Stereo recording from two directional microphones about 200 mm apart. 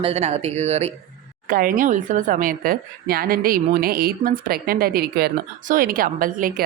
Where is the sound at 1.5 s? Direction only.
45° right (ahead or behind).